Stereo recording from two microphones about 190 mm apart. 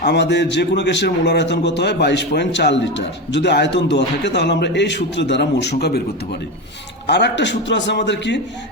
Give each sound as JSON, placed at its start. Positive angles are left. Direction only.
{"t": 0.0, "sound": "a man's voice", "side_deg": 65}
{"t": 7.1, "sound": "a man's voice", "side_deg": 65}